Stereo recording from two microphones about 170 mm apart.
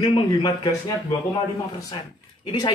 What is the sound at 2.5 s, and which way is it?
Speech, 25° left (ahead or behind).